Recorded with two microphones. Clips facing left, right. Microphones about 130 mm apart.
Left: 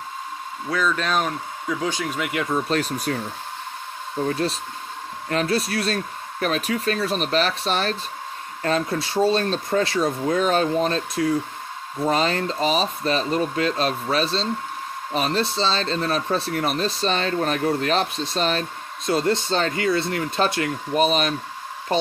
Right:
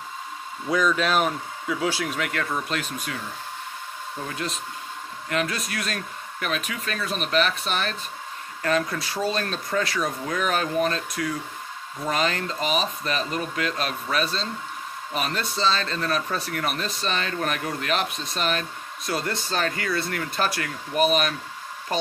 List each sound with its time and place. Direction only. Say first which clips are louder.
0.7 s speech: right 1 dB; 15° right (ahead or behind)
2.5 s speech: left 6 dB; 35° left (ahead or behind)
4.3 s speech: left 7 dB; 35° left (ahead or behind)